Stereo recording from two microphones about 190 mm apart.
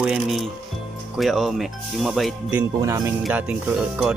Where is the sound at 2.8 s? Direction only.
15° right (ahead or behind).